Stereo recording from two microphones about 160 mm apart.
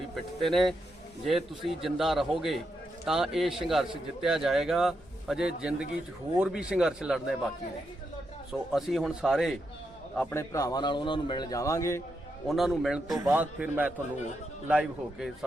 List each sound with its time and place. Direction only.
0.2 s a man's voice: centre (ahead or behind)
8.7 s a man's voice: centre (ahead or behind)
10.2 s a man's voice: 20° left (ahead or behind)
12.5 s a man's voice: centre (ahead or behind)
13.1 s a man's voice: 15° right (ahead or behind)